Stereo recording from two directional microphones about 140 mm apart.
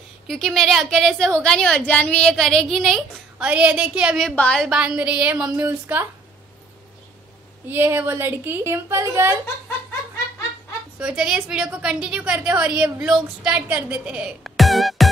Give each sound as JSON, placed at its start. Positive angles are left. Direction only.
{"t": 0.3, "sound": "a woman's voice", "side_deg": 0}
{"t": 4.4, "sound": "a woman's voice", "side_deg": 5}
{"t": 7.6, "sound": "a woman's voice", "side_deg": -15}
{"t": 11.0, "sound": "a woman's voice", "side_deg": -5}